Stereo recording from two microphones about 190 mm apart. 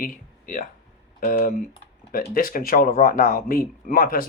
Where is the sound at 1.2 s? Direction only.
45° left (ahead or behind).